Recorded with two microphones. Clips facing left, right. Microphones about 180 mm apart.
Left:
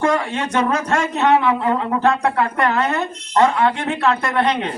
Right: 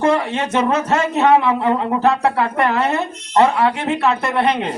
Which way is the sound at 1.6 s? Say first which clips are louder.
Right 2 dB; 25° right (ahead or behind).